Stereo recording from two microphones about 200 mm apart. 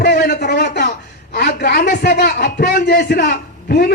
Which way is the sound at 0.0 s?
55° left (ahead or behind).